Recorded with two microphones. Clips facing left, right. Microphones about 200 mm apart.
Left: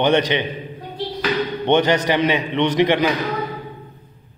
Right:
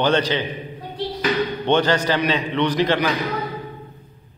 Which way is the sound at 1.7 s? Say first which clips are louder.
Left 2 dB; 20° left (ahead or behind).